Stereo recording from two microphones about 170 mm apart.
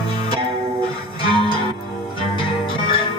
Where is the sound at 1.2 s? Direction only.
30° left (ahead or behind).